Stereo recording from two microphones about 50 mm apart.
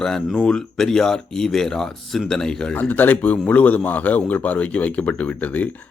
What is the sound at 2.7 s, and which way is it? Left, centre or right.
Speech, left.